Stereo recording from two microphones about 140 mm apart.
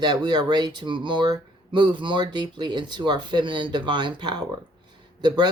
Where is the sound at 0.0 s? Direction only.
30° right (ahead or behind).